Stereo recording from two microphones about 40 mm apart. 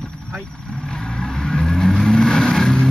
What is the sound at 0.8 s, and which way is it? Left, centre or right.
Vehicle, centre.